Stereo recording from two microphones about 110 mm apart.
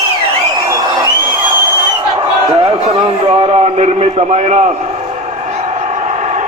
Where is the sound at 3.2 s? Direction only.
70° right (ahead or behind); by 4.7 s 90° right.